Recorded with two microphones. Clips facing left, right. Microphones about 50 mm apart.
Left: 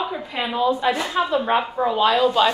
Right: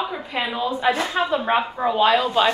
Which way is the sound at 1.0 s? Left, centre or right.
Right.